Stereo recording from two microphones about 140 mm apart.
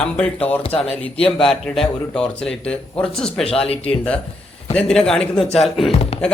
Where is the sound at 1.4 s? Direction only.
5° left (ahead or behind).